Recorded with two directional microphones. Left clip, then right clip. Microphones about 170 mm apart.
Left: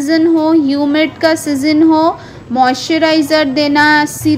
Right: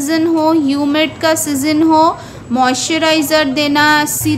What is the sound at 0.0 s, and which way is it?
A woman's voice, 15° left (ahead or behind).